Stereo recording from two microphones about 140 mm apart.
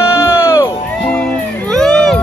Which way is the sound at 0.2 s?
20° left (ahead or behind).